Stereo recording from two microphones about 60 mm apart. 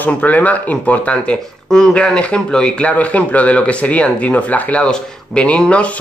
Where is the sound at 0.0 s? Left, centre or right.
Left.